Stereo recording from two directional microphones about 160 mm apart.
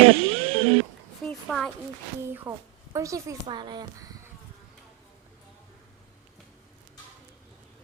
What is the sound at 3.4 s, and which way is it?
Speech, 30° right (ahead or behind).